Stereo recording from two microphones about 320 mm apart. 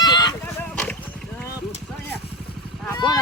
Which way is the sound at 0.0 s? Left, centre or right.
Centre.